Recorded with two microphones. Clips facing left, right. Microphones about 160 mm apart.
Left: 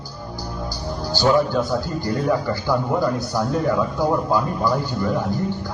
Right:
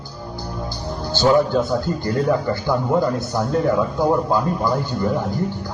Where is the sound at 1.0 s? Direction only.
20° right (ahead or behind).